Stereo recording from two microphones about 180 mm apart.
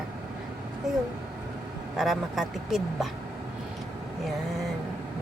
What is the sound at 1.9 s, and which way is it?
Speech, centre (ahead or behind).